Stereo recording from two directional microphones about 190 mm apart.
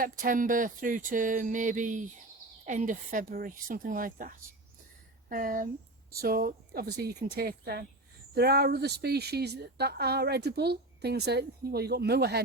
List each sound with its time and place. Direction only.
0.0 s speech: 45° right (ahead or behind)